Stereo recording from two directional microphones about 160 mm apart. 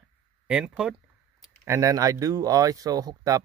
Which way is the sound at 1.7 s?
20° right (ahead or behind).